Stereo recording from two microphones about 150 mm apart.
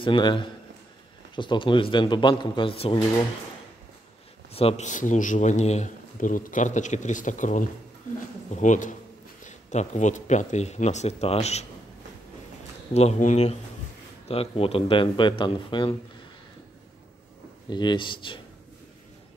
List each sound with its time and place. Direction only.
0.0 s speech: 35° left (ahead or behind)
4.5 s a man's voice: 40° left (ahead or behind)
12.9 s speech: 45° left (ahead or behind); by 15.9 s 30° left (ahead or behind)
17.6 s speech: 30° left (ahead or behind)